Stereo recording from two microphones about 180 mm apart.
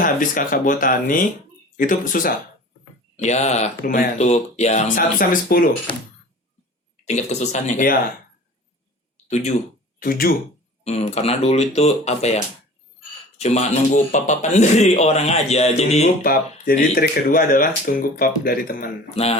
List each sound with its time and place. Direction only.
0.0 s speech: 50° left (ahead or behind)
3.2 s a man's voice: 40° left (ahead or behind)
7.0 s a man's voice: 40° left (ahead or behind)
10.0 s speech: 55° left (ahead or behind)
10.8 s a man's voice: 35° left (ahead or behind)
13.4 s a man's voice: 40° left (ahead or behind)
16.2 s speech: 55° left (ahead or behind)
19.1 s a man's voice: 35° left (ahead or behind)